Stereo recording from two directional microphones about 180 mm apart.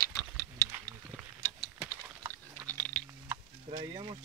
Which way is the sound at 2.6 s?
10° left (ahead or behind).